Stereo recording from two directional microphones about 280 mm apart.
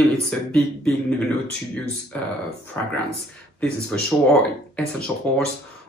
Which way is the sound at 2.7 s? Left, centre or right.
Centre.